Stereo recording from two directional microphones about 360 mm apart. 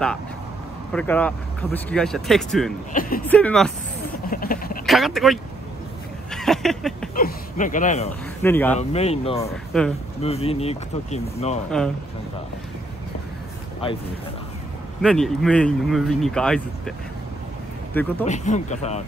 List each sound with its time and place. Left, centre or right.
0.9 s speech: centre
2.9 s speech: left
3.3 s speech: centre
4.3 s vehicle: left
4.8 s speech: centre
6.3 s a sound: centre
7.2 s speech: left
8.4 s speech: centre
8.7 s speech: centre
9.5 s speech: centre
10.2 s speech: centre
13.8 s speech: centre
15.0 s speech: centre
18.2 s speech: centre